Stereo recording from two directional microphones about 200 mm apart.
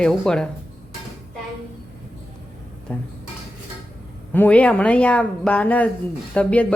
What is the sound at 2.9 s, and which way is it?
Speech, 10° left (ahead or behind).